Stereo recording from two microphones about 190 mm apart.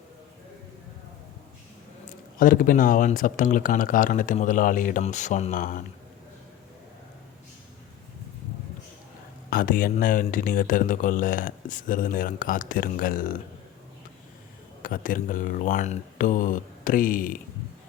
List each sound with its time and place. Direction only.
2.4 s speech: 45° left (ahead or behind)
9.5 s speech: 45° left (ahead or behind)
14.8 s speech: 45° left (ahead or behind)